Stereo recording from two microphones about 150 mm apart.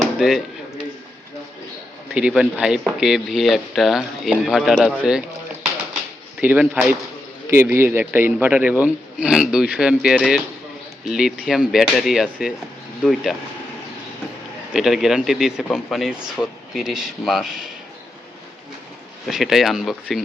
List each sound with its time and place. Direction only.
0.0 s a sound: centre (ahead or behind)
2.1 s speech: 5° right (ahead or behind)
6.4 s speech: 10° right (ahead or behind)
14.7 s speech: 5° right (ahead or behind)
19.3 s speech: centre (ahead or behind)